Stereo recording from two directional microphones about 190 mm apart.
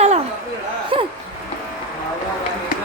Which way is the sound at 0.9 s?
25° right (ahead or behind).